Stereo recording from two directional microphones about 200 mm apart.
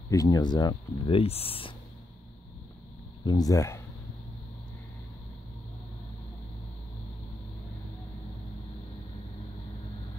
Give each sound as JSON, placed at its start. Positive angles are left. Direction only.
{"t": 0.1, "sound": "speech", "side_deg": 20}
{"t": 3.3, "sound": "speech", "side_deg": 20}